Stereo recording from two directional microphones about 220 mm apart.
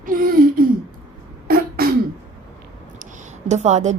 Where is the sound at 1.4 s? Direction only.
45° right (ahead or behind).